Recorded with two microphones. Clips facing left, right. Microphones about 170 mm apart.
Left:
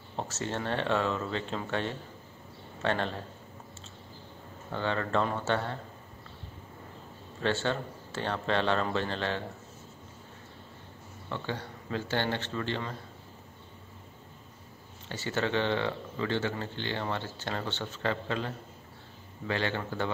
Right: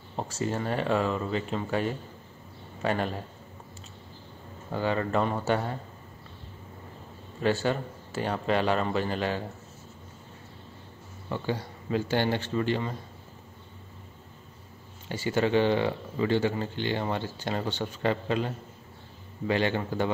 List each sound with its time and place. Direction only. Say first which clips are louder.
0.1 s speech: right 4 dB; 5° right (ahead or behind)
4.7 s speech: right 3 dB; 10° right (ahead or behind)
7.6 s speech: right 3 dB; 10° right (ahead or behind)
11.2 s speech: right 5 dB; 10° right (ahead or behind)
15.0 s speech: right 5 dB; 10° right (ahead or behind)